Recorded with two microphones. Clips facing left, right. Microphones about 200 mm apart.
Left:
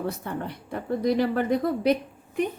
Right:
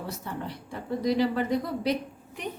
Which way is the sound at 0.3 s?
55° left (ahead or behind).